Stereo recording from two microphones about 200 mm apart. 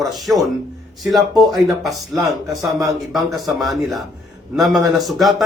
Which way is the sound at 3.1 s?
Centre (ahead or behind).